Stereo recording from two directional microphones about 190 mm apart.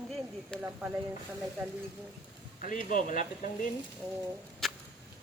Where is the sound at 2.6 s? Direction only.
45° left (ahead or behind).